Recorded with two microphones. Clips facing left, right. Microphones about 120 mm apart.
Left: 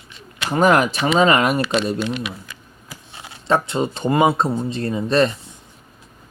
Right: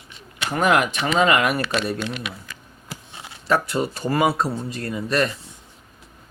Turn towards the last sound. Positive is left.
turn(degrees=25)  # may be behind; listen again after turning